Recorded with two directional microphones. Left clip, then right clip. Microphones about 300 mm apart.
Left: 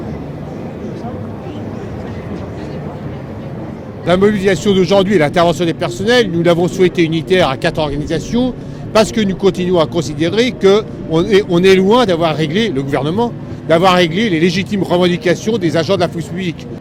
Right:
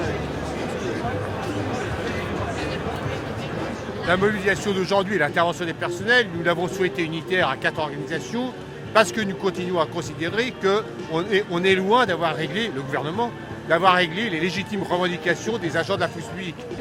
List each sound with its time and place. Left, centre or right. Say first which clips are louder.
4.0 s speech: left 8 dB; left